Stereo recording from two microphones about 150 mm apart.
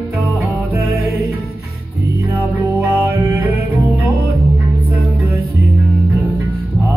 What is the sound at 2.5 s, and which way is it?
Music, 20° right (ahead or behind).